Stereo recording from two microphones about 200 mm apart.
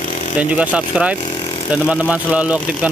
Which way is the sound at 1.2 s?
25° left (ahead or behind).